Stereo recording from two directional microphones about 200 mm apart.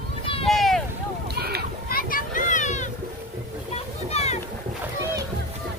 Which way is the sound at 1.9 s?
45° left (ahead or behind).